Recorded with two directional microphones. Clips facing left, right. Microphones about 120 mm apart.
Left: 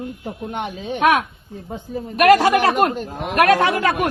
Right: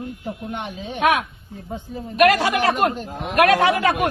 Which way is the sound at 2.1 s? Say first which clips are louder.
Left 3 dB; 45° left (ahead or behind).